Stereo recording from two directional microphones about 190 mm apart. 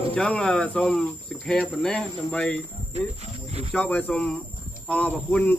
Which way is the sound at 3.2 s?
35° right (ahead or behind).